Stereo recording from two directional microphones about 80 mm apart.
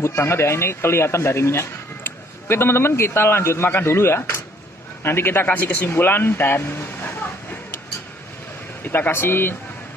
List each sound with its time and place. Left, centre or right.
0.0 s a man's voice: left
5.9 s a sound: left
8.8 s speech: left